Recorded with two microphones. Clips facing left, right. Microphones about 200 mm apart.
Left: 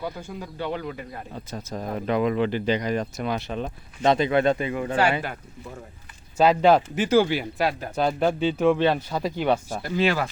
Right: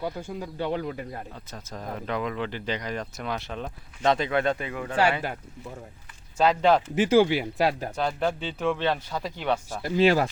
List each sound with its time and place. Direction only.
0.0 s speech: 30° right (ahead or behind)
1.5 s speech: 15° left (ahead or behind); by 4.8 s centre (ahead or behind)
6.3 s speech: 5° left (ahead or behind)
6.9 s speech: 25° right (ahead or behind)
7.9 s speech: 10° left (ahead or behind)
9.8 s speech: 30° right (ahead or behind)